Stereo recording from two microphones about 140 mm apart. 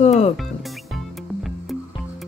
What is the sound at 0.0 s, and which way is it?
Speech, 50° left (ahead or behind).